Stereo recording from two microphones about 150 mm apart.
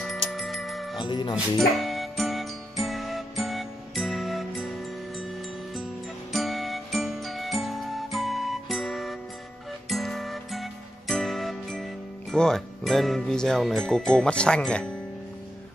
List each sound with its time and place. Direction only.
0.0 s music: centre (ahead or behind)
0.9 s speech: 30° left (ahead or behind)
1.3 s music: centre (ahead or behind)
6.3 s music: centre (ahead or behind)